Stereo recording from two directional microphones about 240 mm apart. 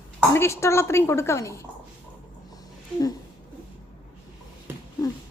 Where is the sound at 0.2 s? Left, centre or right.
Centre.